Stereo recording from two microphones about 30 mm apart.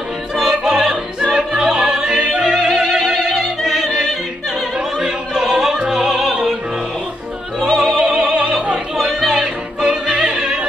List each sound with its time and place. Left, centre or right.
0.4 s opera: centre
1.7 s music: centre
4.7 s opera: right
5.9 s music: centre
7.6 s music: centre
8.0 s opera: right
9.3 s music: right